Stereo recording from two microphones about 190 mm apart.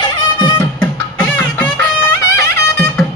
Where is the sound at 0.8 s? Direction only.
10° left (ahead or behind).